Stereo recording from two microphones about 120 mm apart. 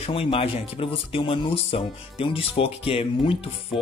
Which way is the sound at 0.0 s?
50° left (ahead or behind).